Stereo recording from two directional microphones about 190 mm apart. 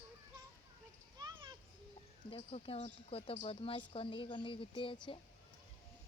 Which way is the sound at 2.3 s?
30° left (ahead or behind).